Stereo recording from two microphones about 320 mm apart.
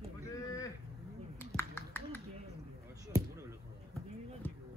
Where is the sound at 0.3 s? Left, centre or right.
Centre.